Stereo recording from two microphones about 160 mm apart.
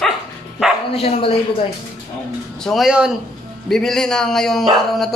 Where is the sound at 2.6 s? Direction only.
Centre (ahead or behind).